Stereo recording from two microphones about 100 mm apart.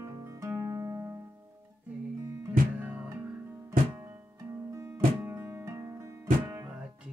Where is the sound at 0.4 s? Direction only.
30° right (ahead or behind).